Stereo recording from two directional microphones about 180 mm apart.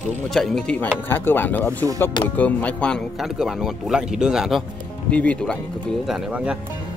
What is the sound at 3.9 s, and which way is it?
Speech, 5° right (ahead or behind).